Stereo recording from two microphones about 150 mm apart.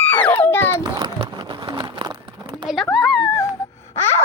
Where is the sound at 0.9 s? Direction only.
25° right (ahead or behind).